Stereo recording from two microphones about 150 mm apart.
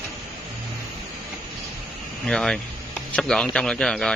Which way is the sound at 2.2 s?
5° left (ahead or behind).